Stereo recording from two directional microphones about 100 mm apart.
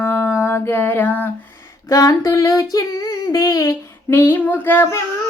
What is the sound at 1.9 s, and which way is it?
Female singing, 35° left (ahead or behind).